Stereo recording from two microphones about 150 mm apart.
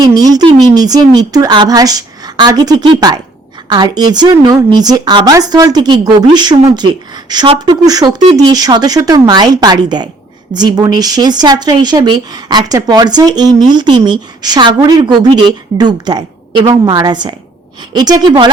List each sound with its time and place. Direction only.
0.0 s speech: 25° right (ahead or behind)